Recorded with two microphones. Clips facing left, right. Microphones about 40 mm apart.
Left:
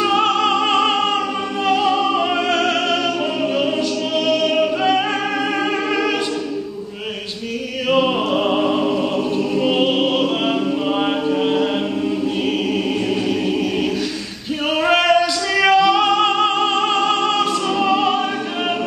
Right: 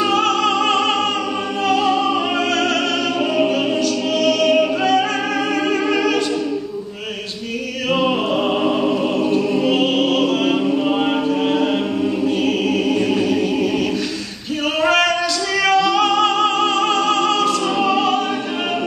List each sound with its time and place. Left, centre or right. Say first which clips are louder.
0.1 s music: even; centre
4.3 s a capella: right 2 dB; centre
7.9 s music: left 1 dB; centre
9.8 s music: even; centre
13.1 s choir: right 2 dB; centre
14.8 s music: left 2 dB; centre